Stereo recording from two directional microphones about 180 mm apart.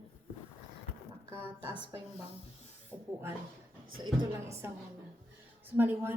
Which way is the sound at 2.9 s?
10° left (ahead or behind).